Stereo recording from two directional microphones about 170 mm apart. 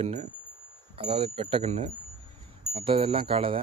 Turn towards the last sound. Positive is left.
turn(degrees=-30)  # may be behind; listen again after turning